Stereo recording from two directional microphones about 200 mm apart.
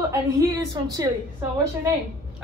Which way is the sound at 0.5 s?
20° right (ahead or behind).